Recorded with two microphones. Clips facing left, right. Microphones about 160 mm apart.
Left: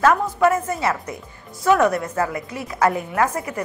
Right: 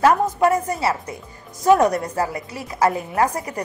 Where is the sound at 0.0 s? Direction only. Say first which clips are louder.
Right 1 dB; 35° right (ahead or behind).